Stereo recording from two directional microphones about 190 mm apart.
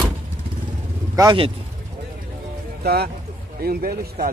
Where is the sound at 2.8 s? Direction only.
55° right (ahead or behind).